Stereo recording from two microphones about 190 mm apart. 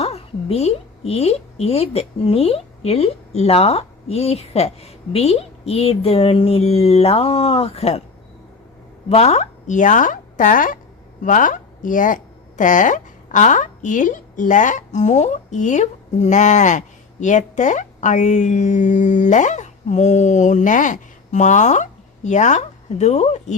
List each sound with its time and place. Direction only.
0.0 s a woman's voice: 30° left (ahead or behind)
9.0 s speech: 35° left (ahead or behind)